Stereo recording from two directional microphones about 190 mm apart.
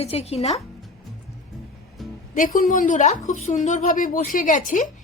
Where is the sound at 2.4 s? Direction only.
45° left (ahead or behind).